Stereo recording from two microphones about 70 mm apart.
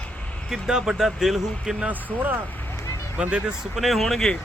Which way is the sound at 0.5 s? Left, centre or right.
Centre.